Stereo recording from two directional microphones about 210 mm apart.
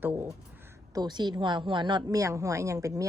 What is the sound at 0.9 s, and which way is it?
A woman's voice, 20° right (ahead or behind).